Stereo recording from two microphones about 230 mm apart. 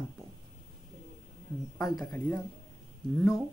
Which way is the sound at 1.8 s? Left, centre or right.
Centre.